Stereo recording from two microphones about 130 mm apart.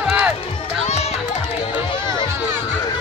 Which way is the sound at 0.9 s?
55° left (ahead or behind).